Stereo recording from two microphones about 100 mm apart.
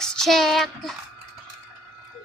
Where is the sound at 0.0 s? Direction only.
5° left (ahead or behind).